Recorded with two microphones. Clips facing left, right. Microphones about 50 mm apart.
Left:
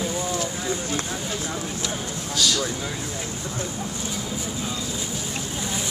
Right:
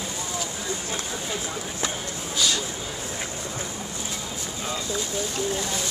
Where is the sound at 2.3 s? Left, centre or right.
Right.